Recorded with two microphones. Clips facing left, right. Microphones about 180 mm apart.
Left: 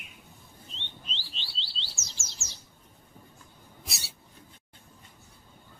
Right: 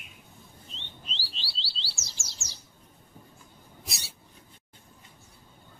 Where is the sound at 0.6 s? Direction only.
Centre (ahead or behind).